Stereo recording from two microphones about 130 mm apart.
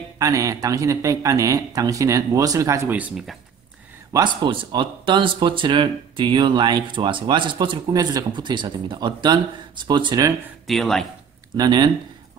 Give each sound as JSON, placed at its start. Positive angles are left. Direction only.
{"t": 0.2, "sound": "a man's voice", "side_deg": -25}
{"t": 3.0, "sound": "a man's voice", "side_deg": -5}
{"t": 4.1, "sound": "speech", "side_deg": -35}
{"t": 10.7, "sound": "a man's voice", "side_deg": 0}
{"t": 11.5, "sound": "speech", "side_deg": -35}